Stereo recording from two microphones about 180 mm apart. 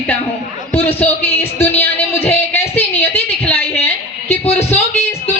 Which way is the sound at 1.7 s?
35° left (ahead or behind).